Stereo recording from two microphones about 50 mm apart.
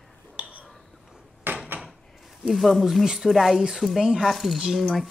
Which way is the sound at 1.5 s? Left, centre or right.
Right.